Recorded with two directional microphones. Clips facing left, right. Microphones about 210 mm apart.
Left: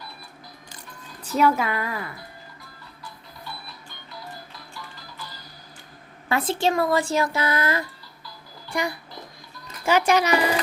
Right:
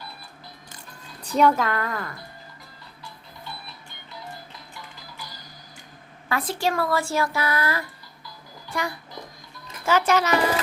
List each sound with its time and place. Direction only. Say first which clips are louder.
1.2 s speech: right 1 dB; 5° left (ahead or behind)
4.7 s music: left 1 dB; 15° right (ahead or behind)
6.2 s speech: left 3 dB; 25° left (ahead or behind)